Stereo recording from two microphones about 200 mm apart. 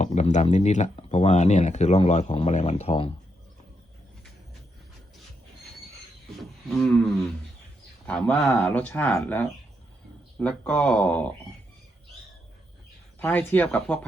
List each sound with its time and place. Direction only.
0.0 s speech: 35° left (ahead or behind)
6.4 s a sound: centre (ahead or behind)
8.0 s speech: 5° left (ahead or behind)
13.1 s speech: 10° left (ahead or behind)